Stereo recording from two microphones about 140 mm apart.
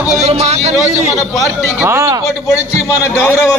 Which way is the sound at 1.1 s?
25° left (ahead or behind).